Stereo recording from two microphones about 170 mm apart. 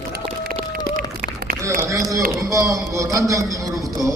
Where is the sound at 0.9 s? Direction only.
60° right (ahead or behind).